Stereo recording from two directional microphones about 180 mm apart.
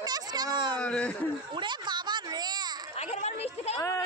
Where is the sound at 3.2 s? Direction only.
35° left (ahead or behind).